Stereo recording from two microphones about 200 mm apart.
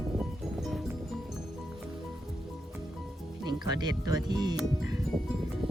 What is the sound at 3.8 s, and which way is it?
Speech, 20° right (ahead or behind).